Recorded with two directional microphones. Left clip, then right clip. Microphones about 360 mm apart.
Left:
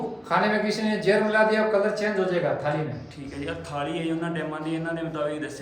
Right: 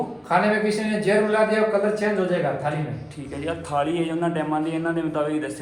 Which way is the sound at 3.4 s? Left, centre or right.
Centre.